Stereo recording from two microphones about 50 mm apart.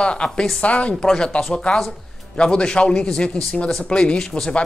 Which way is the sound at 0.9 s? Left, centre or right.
Centre.